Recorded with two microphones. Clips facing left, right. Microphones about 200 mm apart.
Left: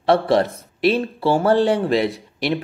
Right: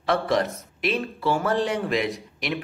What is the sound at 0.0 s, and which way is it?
Speech, 30° left (ahead or behind).